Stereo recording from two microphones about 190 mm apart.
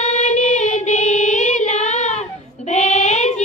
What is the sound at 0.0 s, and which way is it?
Child singing, 35° left (ahead or behind).